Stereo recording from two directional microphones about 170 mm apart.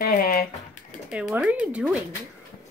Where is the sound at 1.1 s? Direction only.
5° right (ahead or behind).